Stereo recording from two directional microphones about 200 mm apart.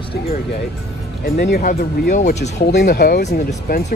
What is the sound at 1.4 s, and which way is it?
Speech, 45° left (ahead or behind).